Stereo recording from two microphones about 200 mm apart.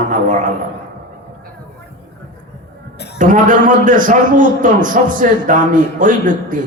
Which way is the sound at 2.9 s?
55° left (ahead or behind).